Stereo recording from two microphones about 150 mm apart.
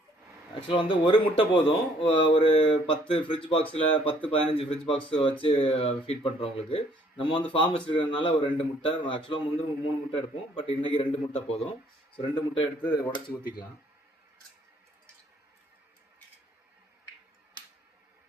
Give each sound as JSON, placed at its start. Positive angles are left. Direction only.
{"t": 0.7, "sound": "a man's voice", "side_deg": 35}